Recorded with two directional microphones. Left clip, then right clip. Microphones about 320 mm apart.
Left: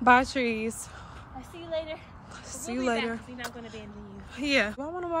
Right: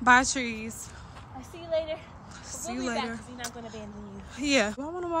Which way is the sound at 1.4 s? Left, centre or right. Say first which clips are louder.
Right 4 dB; right.